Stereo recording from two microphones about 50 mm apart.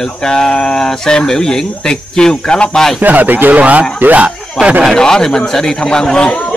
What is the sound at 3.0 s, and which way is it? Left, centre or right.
Speech, right.